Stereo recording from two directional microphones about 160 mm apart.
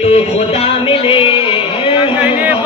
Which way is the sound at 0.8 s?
35° left (ahead or behind).